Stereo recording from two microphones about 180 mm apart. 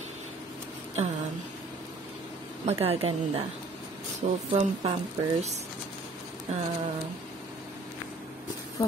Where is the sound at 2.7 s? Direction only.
35° right (ahead or behind).